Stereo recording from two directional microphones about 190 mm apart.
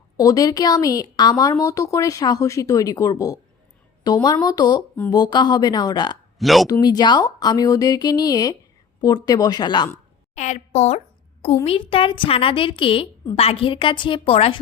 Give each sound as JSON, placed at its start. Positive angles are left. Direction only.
{"t": 0.2, "sound": "a woman's voice", "side_deg": 20}
{"t": 6.4, "sound": "speech", "side_deg": 0}
{"t": 6.7, "sound": "a woman's voice", "side_deg": 20}
{"t": 10.3, "sound": "a woman's voice", "side_deg": 40}